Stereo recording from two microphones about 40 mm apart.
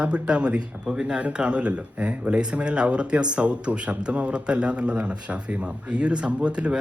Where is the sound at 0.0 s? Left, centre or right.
Right.